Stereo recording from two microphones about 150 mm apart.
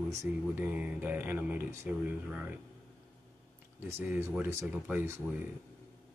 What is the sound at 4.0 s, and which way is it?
Speech, 15° right (ahead or behind).